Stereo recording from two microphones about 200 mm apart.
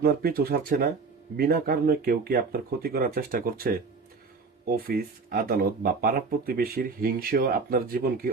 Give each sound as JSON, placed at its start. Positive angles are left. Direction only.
{"t": 0.0, "sound": "speech", "side_deg": -50}